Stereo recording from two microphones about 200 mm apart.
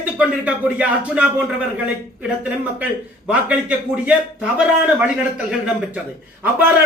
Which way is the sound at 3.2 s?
5° right (ahead or behind).